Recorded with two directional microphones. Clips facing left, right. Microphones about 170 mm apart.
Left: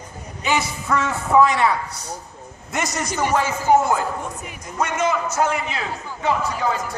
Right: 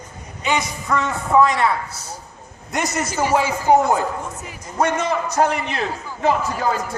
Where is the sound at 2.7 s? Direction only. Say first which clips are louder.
Right 2 dB; 5° right (ahead or behind).